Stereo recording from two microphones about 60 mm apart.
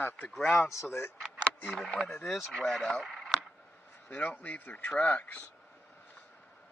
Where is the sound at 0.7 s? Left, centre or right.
Left.